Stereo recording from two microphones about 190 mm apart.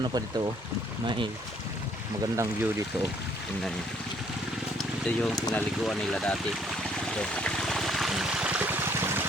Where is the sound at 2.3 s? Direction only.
15° right (ahead or behind).